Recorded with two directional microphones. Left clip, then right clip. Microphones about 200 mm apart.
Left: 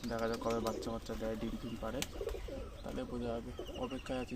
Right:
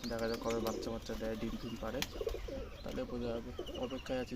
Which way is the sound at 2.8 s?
10° left (ahead or behind).